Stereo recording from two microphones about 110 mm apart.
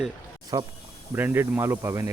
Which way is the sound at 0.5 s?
35° right (ahead or behind).